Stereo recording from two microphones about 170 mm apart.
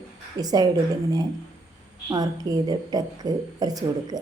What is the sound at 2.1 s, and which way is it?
A woman's voice, 20° right (ahead or behind).